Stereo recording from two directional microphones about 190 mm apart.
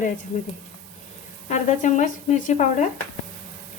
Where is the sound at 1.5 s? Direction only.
40° left (ahead or behind).